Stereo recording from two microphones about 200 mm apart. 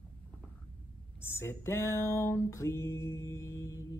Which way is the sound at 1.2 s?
10° left (ahead or behind).